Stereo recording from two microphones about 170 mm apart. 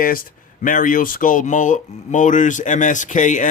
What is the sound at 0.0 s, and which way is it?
Speech, 55° left (ahead or behind).